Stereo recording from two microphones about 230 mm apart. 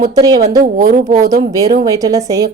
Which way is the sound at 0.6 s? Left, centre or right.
Right.